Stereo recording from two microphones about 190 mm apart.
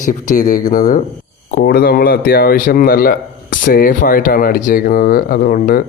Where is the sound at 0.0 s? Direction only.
40° left (ahead or behind).